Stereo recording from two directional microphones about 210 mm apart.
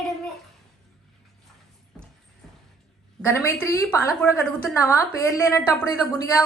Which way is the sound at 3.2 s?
10° left (ahead or behind).